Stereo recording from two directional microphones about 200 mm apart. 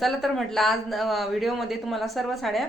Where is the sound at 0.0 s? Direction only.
Centre (ahead or behind).